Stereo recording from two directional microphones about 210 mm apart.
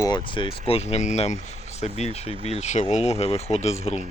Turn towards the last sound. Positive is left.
turn(degrees=30)  # may be behind; listen again after turning